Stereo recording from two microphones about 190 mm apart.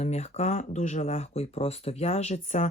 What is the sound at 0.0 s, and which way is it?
Speech, 35° left (ahead or behind).